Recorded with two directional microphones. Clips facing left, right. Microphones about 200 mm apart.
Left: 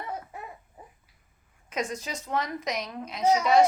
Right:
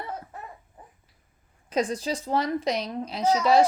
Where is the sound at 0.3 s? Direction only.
10° left (ahead or behind).